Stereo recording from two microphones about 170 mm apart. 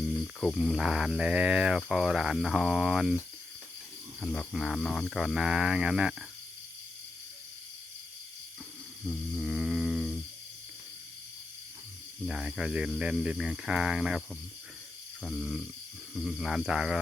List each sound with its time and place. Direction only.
0.3 s speech: centre (ahead or behind)
4.2 s speech: 5° left (ahead or behind)
9.0 s a sound: centre (ahead or behind)
12.2 s speech: centre (ahead or behind)
15.2 s speech: 5° left (ahead or behind)